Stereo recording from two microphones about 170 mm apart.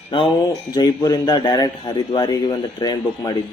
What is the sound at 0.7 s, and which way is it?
A man's voice, 25° left (ahead or behind).